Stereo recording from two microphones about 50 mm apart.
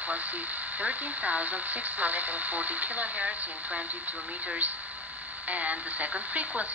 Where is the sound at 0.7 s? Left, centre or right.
Right.